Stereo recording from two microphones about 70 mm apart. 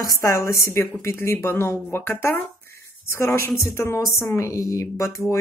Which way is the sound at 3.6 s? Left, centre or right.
Left.